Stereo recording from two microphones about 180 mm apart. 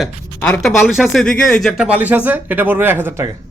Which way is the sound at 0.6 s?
Centre (ahead or behind).